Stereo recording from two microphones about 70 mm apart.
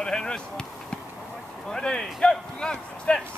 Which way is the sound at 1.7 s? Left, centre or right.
Centre.